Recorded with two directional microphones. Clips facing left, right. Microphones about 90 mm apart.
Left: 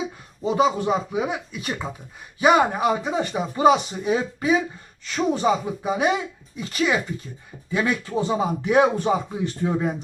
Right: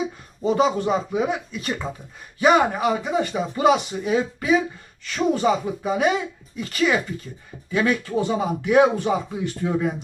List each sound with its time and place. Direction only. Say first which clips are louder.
0.4 s speech: right 1 dB; 5° left (ahead or behind)
3.3 s speech: left 2 dB; 20° left (ahead or behind)
8.6 s speech: right 2 dB; 30° left (ahead or behind)